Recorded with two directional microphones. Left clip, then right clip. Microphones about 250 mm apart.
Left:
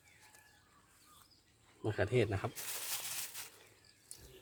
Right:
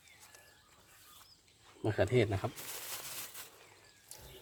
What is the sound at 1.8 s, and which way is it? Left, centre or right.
Speech, right.